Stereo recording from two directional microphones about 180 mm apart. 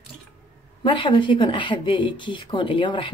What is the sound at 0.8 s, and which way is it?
Speech, 25° left (ahead or behind).